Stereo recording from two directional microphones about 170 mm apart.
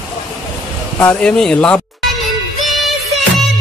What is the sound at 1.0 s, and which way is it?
Speech, 10° left (ahead or behind).